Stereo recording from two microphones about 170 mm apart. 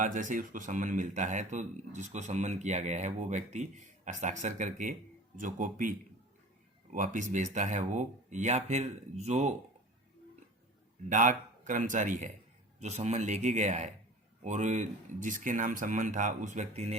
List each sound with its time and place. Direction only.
0.0 s speech: 50° right (ahead or behind)
6.9 s speech: 50° right (ahead or behind)
11.1 s speech: 50° right (ahead or behind)